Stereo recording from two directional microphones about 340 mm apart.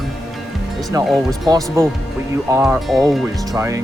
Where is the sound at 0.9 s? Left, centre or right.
Centre.